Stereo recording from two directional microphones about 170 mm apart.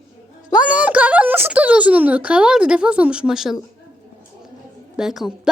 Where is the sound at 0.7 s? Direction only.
10° right (ahead or behind).